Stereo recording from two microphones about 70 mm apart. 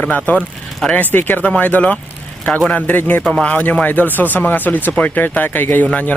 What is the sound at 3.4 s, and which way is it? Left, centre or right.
Speech, left.